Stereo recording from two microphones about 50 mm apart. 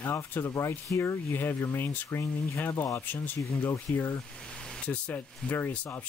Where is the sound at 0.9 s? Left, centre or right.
Left.